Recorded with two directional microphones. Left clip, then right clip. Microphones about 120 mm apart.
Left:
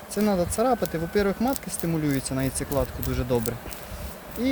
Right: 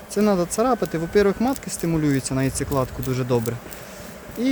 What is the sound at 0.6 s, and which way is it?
Speech, 90° right.